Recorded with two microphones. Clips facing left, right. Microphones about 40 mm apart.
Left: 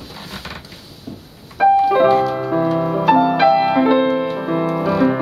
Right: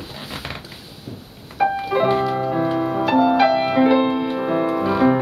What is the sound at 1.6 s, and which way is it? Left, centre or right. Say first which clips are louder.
Music: left 7 dB; centre.